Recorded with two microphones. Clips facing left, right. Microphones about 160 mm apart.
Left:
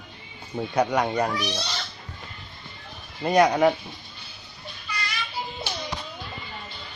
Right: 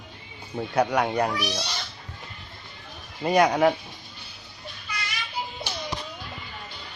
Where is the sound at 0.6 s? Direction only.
5° right (ahead or behind).